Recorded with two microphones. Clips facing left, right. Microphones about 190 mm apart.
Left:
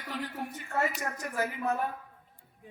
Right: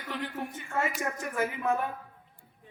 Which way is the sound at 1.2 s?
40° left (ahead or behind).